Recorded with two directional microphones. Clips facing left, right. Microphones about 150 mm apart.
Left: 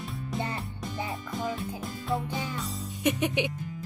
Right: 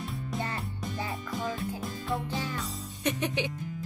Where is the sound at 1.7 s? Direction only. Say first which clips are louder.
Left 2 dB; centre (ahead or behind).